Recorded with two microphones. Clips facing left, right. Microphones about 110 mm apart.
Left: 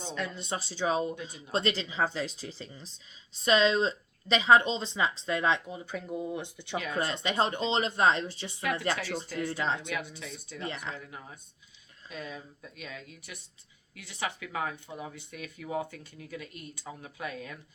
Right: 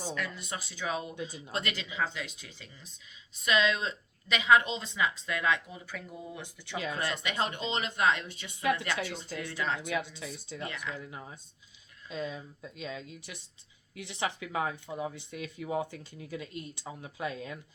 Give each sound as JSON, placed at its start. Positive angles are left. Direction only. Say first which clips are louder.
{"t": 0.0, "sound": "speech", "louder": "left 1 dB", "side_deg": 25}
{"t": 9.8, "sound": "speech", "louder": "right 2 dB", "side_deg": -25}
{"t": 10.6, "sound": "speech", "louder": "left 2 dB", "side_deg": 30}
{"t": 10.9, "sound": "speech", "louder": "right 2 dB", "side_deg": -20}